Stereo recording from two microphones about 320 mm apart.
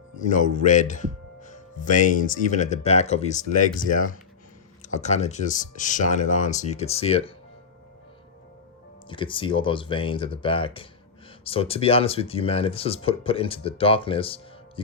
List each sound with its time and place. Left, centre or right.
0.3 s speech: left
9.0 s speech: centre